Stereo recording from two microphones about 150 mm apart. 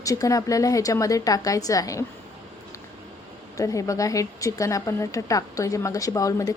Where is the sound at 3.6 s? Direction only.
20° left (ahead or behind).